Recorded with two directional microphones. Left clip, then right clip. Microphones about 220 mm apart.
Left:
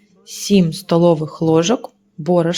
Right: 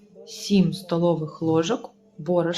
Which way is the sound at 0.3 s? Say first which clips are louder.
Left 7 dB; 30° left (ahead or behind).